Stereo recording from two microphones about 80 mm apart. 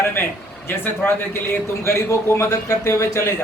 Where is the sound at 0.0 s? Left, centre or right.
Left.